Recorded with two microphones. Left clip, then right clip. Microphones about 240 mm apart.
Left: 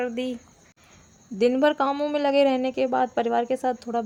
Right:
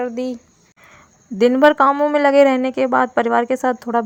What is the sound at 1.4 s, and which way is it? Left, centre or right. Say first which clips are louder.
Speech: right 8 dB; right.